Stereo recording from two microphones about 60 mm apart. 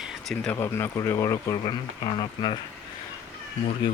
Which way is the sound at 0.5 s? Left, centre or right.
Left.